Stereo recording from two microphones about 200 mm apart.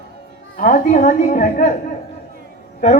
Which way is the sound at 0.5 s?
40° left (ahead or behind).